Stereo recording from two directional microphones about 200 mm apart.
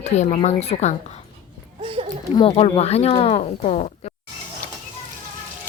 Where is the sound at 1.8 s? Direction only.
30° right (ahead or behind).